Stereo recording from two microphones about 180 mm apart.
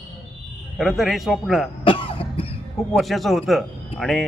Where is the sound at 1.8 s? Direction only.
30° left (ahead or behind).